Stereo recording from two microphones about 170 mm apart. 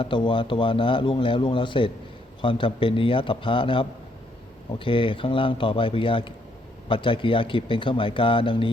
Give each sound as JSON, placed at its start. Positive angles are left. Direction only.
{"t": 0.0, "sound": "speech", "side_deg": 30}